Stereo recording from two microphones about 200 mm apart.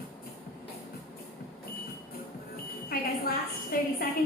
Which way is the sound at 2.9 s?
50° left (ahead or behind).